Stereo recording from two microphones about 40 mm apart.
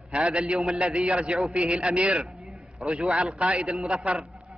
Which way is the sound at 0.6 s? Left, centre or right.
Centre.